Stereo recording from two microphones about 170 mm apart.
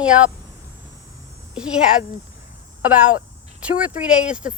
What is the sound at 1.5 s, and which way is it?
Speech, 5° right (ahead or behind).